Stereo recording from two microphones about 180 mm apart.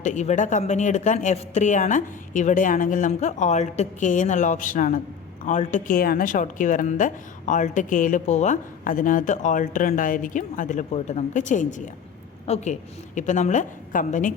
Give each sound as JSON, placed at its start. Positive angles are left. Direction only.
{"t": 0.0, "sound": "a woman's voice", "side_deg": 40}